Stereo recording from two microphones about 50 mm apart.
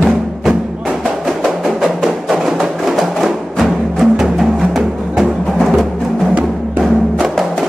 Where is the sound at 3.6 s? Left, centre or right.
Centre.